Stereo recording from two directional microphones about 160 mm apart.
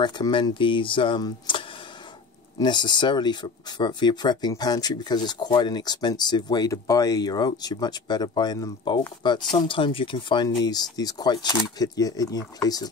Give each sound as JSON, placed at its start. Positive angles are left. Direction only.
{"t": 0.0, "sound": "speech", "side_deg": 30}
{"t": 2.6, "sound": "speech", "side_deg": 30}